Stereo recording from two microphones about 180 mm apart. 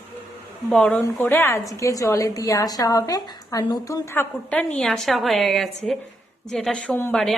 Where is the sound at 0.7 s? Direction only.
5° left (ahead or behind).